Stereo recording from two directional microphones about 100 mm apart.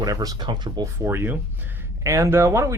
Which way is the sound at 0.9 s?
25° right (ahead or behind).